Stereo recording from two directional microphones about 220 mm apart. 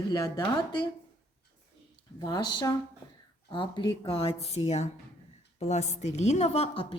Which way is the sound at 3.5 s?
20° left (ahead or behind).